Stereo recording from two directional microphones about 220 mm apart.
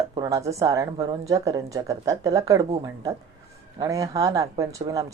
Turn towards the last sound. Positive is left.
turn(degrees=-15)  # may be behind; listen again after turning